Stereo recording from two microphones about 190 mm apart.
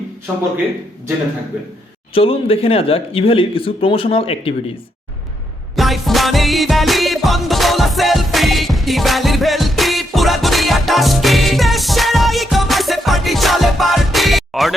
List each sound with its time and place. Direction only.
2.1 s speech: 30° left (ahead or behind)
5.7 s music: centre (ahead or behind)